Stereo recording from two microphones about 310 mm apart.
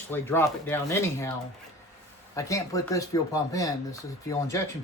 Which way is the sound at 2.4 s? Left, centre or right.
Centre.